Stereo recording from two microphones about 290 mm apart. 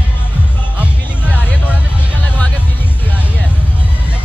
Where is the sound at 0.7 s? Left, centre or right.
Centre.